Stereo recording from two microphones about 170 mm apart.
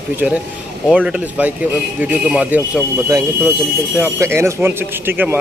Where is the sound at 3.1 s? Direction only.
20° right (ahead or behind).